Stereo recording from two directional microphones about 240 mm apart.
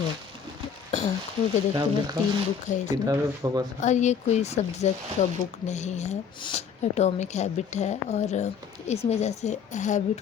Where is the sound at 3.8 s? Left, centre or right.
Left.